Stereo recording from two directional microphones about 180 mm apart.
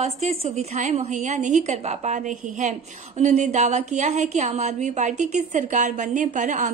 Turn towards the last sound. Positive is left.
turn(degrees=-40)  # may be behind; listen again after turning